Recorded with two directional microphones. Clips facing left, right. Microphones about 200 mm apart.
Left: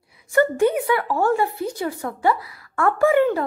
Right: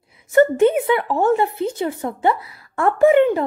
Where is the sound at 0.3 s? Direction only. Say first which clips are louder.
Right 4 dB; 20° right (ahead or behind).